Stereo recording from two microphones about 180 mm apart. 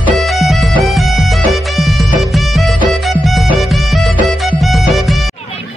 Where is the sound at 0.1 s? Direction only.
Centre (ahead or behind).